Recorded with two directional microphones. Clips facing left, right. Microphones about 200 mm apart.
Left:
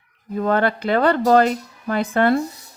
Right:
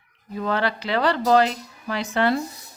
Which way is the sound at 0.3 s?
50° left (ahead or behind).